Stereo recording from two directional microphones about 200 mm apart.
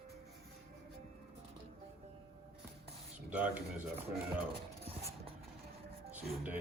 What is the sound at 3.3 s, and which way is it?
Speech, 10° right (ahead or behind).